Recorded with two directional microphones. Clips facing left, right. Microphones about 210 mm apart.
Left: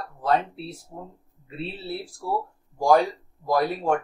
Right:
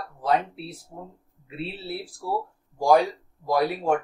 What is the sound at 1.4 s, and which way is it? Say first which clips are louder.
Speech: even; 5° right (ahead or behind).